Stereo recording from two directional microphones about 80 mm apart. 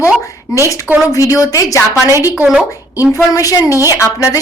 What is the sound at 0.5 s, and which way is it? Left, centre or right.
A woman's voice, left.